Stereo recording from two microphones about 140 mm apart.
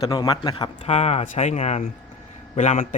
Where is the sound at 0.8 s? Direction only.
50° left (ahead or behind).